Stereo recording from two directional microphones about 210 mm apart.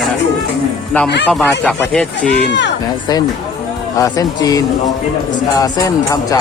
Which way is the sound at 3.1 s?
20° left (ahead or behind).